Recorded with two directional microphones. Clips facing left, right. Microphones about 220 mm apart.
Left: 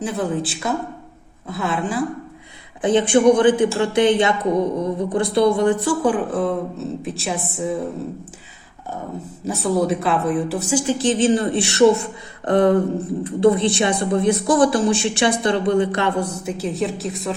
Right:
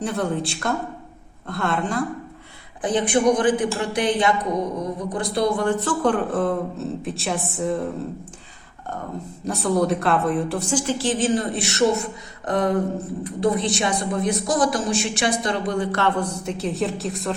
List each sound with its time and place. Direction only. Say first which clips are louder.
0.0 s a woman's voice: left 1 dB; centre (ahead or behind)
2.8 s speech: left 5 dB; 25° left (ahead or behind)
5.8 s a woman's voice: left 2 dB; 5° left (ahead or behind)
9.4 s a woman's voice: left 1 dB; 5° left (ahead or behind)